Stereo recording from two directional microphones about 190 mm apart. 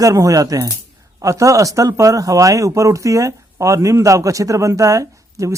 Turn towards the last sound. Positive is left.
turn(degrees=-15)  # may be behind; listen again after turning